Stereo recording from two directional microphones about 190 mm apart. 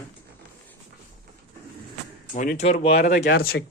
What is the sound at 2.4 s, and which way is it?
Speech, 40° left (ahead or behind).